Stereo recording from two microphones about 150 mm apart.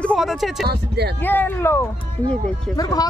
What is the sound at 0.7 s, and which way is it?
Speech, 90° right.